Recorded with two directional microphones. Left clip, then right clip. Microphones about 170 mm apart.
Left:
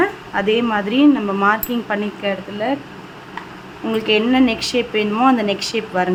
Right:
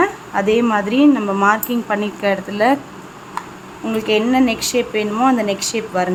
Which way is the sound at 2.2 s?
20° right (ahead or behind).